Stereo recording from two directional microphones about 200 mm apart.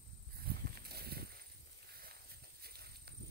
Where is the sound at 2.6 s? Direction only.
50° right (ahead or behind).